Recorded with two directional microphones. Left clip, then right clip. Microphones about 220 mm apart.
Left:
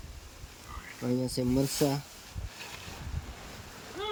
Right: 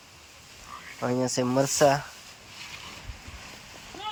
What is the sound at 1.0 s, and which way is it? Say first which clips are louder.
Speech: right 5 dB; 30° right (ahead or behind).